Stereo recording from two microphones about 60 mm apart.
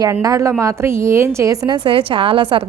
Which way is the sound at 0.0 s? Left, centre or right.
Right.